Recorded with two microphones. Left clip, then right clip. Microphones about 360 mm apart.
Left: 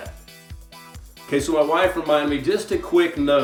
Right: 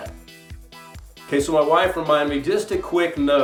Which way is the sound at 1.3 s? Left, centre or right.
Centre.